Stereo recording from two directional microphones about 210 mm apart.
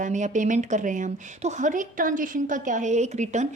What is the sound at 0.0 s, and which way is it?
A woman's voice, 35° right (ahead or behind).